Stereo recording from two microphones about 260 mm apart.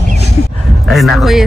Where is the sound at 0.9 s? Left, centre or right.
Centre.